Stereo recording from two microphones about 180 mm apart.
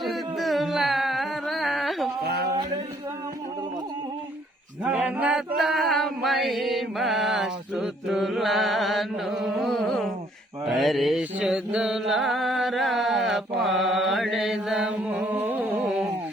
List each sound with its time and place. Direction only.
0.0 s carnatic music: centre (ahead or behind)
2.2 s a sound: 65° right (ahead or behind)
4.8 s mantra: 10° right (ahead or behind)